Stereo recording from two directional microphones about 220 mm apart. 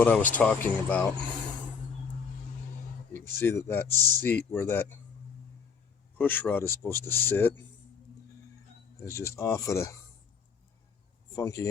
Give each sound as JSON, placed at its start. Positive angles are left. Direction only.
{"t": 0.0, "sound": "speech", "side_deg": 5}
{"t": 3.1, "sound": "speech", "side_deg": 10}
{"t": 6.1, "sound": "speech", "side_deg": 10}
{"t": 9.0, "sound": "speech", "side_deg": 15}
{"t": 11.3, "sound": "speech", "side_deg": 15}